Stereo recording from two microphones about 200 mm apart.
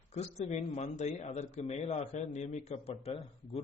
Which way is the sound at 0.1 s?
35° left (ahead or behind).